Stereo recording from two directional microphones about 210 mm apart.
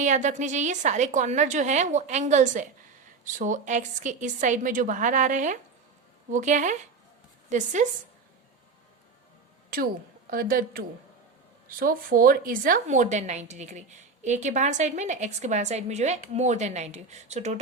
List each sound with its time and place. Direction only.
0.0 s a woman's voice: 35° right (ahead or behind)
9.6 s a woman's voice: 45° right (ahead or behind)